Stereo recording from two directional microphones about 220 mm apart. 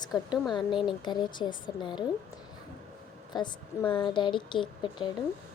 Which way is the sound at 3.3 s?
20° left (ahead or behind).